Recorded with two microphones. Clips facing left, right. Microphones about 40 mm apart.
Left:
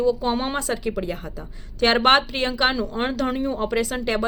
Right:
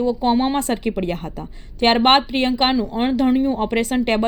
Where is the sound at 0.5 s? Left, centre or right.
Right.